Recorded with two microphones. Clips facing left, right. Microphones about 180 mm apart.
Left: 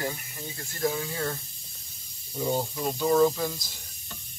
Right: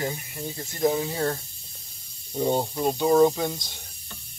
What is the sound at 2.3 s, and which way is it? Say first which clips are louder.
Speech: right 4 dB; 35° right (ahead or behind).